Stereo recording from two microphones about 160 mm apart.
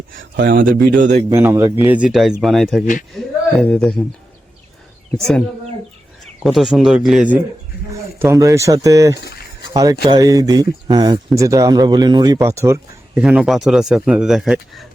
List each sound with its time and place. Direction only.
0.3 s speech: 60° right (ahead or behind)
0.9 s a man's voice: 50° right (ahead or behind)
1.3 s speech: 15° right (ahead or behind); by 4.0 s 5° left (ahead or behind)
5.1 s speech: 5° left (ahead or behind)
6.4 s speech: centre (ahead or behind)
8.2 s speech: 20° right (ahead or behind)
9.2 s a sound: 90° left
9.8 s speech: 20° right (ahead or behind)
13.1 s speech: 5° right (ahead or behind)